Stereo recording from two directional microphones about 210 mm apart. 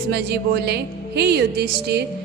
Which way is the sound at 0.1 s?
50° right (ahead or behind).